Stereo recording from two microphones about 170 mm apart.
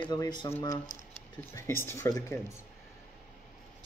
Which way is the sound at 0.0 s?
25° left (ahead or behind).